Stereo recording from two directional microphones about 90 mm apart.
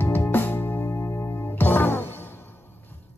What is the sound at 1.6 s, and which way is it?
Music, 20° left (ahead or behind).